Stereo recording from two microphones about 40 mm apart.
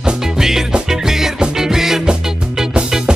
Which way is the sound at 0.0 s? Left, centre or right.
Centre.